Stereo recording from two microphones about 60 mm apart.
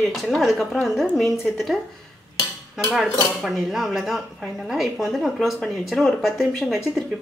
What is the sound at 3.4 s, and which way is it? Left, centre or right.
Speech, centre.